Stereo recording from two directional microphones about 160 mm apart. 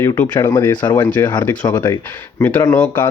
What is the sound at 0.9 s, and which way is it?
Speech, 10° left (ahead or behind).